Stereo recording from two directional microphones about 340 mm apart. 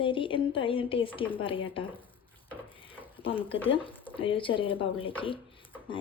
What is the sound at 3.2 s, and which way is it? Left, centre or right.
A woman's voice, centre.